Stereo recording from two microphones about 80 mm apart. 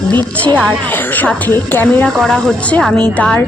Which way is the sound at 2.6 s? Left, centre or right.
Centre.